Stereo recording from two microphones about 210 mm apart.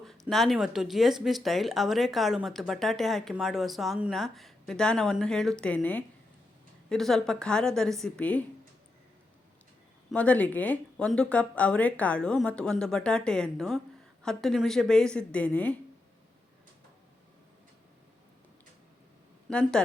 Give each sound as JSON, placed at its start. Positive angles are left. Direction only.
{"t": 0.3, "sound": "speech", "side_deg": 0}
{"t": 10.1, "sound": "speech", "side_deg": 5}
{"t": 19.5, "sound": "speech", "side_deg": 5}